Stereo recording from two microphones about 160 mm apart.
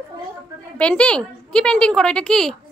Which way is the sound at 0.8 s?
5° left (ahead or behind).